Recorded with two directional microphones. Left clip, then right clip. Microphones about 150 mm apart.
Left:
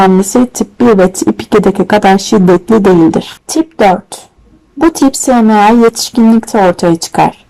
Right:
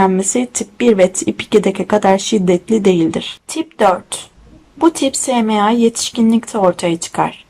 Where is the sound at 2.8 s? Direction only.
35° left (ahead or behind).